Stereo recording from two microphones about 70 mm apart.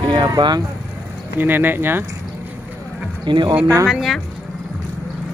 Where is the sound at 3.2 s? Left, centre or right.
Right.